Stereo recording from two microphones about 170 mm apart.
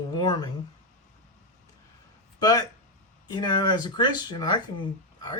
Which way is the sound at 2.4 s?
25° left (ahead or behind).